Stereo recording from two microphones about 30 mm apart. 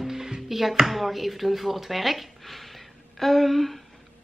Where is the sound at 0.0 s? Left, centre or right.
Centre.